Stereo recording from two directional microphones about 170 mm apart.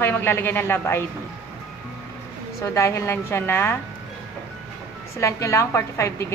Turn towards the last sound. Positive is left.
turn(degrees=15)  # may be behind; listen again after turning